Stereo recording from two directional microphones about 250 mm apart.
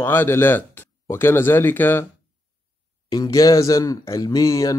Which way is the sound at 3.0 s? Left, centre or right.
Centre.